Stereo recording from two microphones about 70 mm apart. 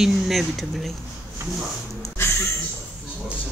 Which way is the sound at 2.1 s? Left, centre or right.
Left.